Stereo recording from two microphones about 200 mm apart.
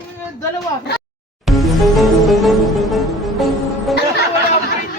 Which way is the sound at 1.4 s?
Centre (ahead or behind).